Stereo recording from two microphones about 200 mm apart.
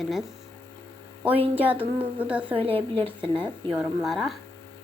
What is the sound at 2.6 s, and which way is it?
Speech, 25° right (ahead or behind).